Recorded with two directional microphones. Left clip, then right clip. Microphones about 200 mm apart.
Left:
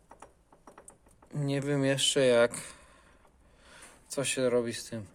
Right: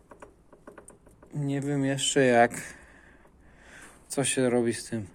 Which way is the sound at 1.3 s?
30° left (ahead or behind).